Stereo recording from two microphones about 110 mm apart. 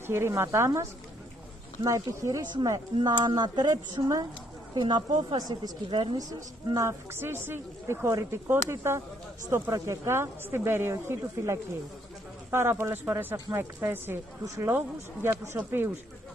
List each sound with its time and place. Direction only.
0.0 s speech: 25° right (ahead or behind)
3.0 s speech: 45° right (ahead or behind)
4.7 s a woman's voice: 45° right (ahead or behind)
6.7 s speech: 30° right (ahead or behind)